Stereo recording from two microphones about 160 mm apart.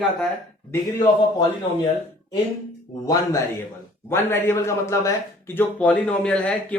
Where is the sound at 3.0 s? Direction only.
20° left (ahead or behind).